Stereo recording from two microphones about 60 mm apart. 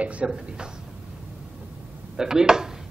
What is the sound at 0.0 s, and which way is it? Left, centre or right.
Speech, right.